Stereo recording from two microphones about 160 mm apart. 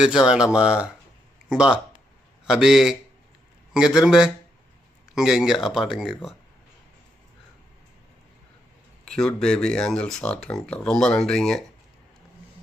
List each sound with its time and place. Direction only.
0.0 s speech: 5° right (ahead or behind)
9.0 s speech: 5° left (ahead or behind)